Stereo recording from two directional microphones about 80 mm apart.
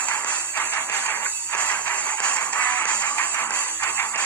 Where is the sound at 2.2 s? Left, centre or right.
Centre.